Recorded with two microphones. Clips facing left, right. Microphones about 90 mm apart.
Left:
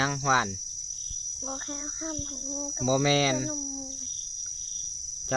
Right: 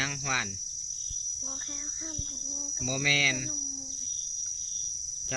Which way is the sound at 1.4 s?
45° left (ahead or behind).